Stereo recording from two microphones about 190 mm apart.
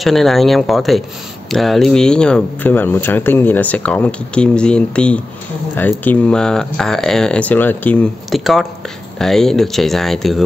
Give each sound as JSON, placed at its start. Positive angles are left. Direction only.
{"t": 0.0, "sound": "speech", "side_deg": 0}